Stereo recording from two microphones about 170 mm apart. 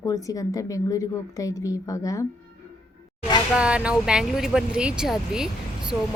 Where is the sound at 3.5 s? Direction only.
5° right (ahead or behind).